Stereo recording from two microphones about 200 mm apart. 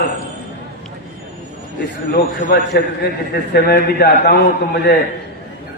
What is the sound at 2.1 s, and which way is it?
A man's voice, 55° left (ahead or behind).